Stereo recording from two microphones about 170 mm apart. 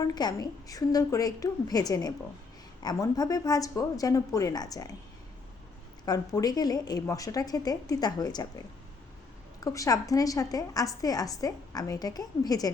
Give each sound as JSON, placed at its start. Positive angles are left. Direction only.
{"t": 0.0, "sound": "a woman's voice", "side_deg": 25}
{"t": 6.1, "sound": "a woman's voice", "side_deg": 25}
{"t": 9.6, "sound": "a woman's voice", "side_deg": 20}